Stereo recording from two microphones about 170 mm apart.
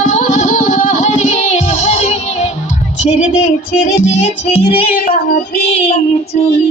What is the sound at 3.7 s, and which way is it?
Music, 40° left (ahead or behind).